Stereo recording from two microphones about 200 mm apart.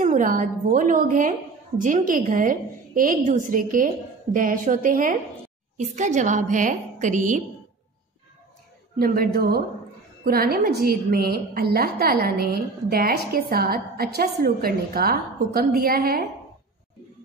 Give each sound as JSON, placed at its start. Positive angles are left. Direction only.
{"t": 0.0, "sound": "a woman's voice", "side_deg": -40}
{"t": 8.9, "sound": "a woman's voice", "side_deg": -50}